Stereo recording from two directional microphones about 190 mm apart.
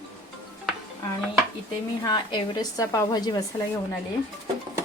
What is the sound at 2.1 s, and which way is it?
A woman's voice, 20° left (ahead or behind).